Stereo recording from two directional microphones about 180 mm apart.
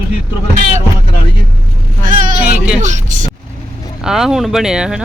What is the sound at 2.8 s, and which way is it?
Speech, 40° right (ahead or behind).